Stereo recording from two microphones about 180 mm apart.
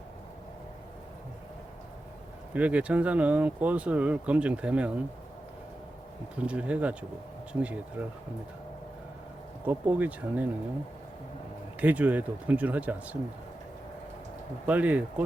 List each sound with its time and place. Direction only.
2.5 s speech: 10° right (ahead or behind)
6.4 s speech: 5° right (ahead or behind)
9.6 s speech: 10° right (ahead or behind)
11.8 s speech: 10° right (ahead or behind)
14.7 s speech: 10° right (ahead or behind)